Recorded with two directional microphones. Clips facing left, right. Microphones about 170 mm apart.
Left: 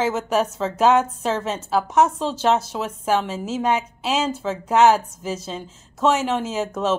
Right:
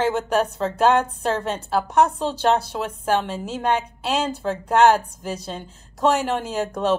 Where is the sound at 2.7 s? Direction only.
5° left (ahead or behind).